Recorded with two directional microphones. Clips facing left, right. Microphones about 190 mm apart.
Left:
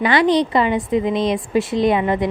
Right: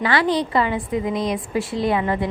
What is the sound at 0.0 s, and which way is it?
A woman's voice, 20° left (ahead or behind).